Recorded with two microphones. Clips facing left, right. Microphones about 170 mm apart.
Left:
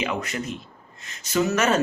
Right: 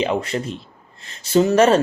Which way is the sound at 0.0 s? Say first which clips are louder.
Right 6 dB; 30° right (ahead or behind).